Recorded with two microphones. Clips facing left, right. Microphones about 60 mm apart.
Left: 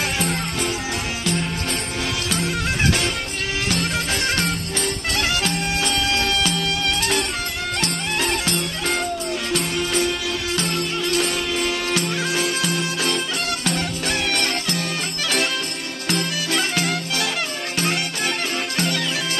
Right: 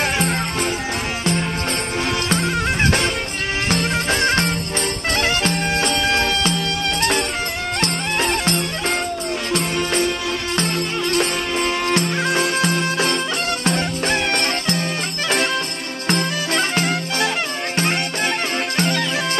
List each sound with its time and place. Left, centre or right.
0.3 s music: right
2.4 s music: right
12.2 s music: right
16.8 s music: right